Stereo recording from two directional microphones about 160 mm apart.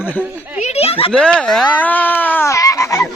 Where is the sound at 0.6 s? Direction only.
40° left (ahead or behind).